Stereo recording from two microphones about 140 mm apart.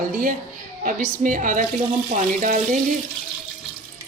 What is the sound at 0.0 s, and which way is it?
A woman's voice, 75° right (ahead or behind).